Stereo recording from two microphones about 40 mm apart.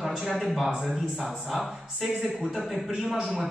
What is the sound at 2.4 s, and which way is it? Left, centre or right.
Speech, centre.